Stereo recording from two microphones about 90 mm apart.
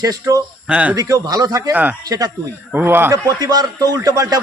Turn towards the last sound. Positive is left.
turn(degrees=-40)  # may be behind; listen again after turning